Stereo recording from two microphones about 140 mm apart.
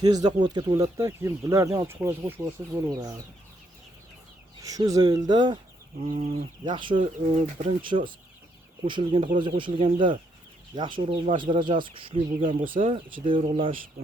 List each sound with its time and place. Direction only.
0.0 s speech: 30° right (ahead or behind)
0.9 s speech: 20° right (ahead or behind)
4.6 s speech: 25° right (ahead or behind)
6.0 s speech: 45° right (ahead or behind)
12.5 s speech: 75° right (ahead or behind)
12.8 s speech: 40° right (ahead or behind)